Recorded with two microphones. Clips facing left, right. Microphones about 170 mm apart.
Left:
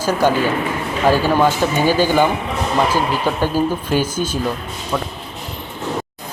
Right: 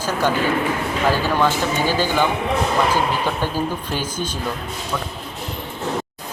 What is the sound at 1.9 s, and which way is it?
Speech, 15° left (ahead or behind).